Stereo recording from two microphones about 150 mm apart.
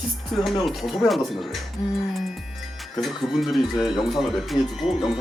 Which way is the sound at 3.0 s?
5° right (ahead or behind).